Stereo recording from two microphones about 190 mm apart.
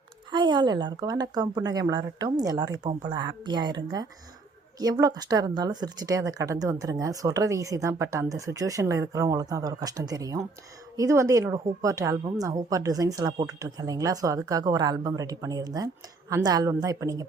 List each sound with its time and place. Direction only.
0.3 s a woman's voice: 25° right (ahead or behind)